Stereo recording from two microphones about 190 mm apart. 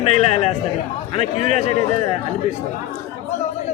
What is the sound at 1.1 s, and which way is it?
Speech, 35° left (ahead or behind).